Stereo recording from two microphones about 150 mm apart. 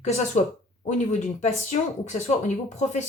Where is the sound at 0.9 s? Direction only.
50° left (ahead or behind).